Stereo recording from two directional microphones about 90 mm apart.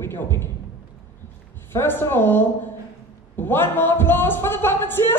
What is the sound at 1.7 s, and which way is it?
Speech, 25° left (ahead or behind).